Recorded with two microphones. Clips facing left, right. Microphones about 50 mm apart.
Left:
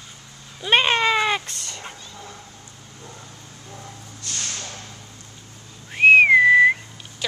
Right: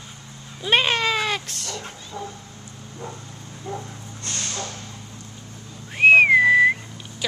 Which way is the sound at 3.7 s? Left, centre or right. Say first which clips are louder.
Right 5 dB; right.